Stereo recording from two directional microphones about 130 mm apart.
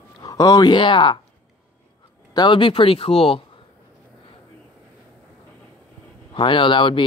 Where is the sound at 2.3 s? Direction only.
40° left (ahead or behind).